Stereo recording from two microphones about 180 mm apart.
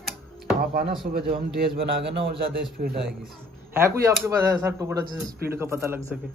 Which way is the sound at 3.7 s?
15° right (ahead or behind).